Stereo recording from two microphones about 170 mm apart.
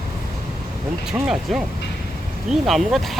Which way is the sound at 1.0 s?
5° right (ahead or behind).